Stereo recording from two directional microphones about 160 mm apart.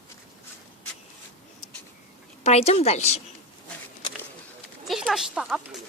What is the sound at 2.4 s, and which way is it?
Speech, 40° left (ahead or behind).